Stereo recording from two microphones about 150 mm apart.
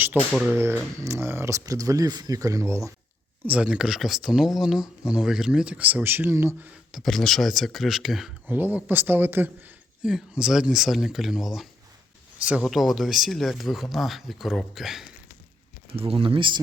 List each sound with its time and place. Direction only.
0.2 s speech: 5° left (ahead or behind)
0.6 s speech: 15° right (ahead or behind)
3.4 s speech: 10° right (ahead or behind)
6.9 s speech: centre (ahead or behind)
8.4 s speech: 10° right (ahead or behind)
16.0 s speech: 40° right (ahead or behind)